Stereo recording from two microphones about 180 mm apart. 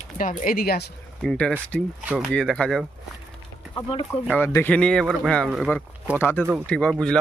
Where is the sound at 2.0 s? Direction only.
5° right (ahead or behind).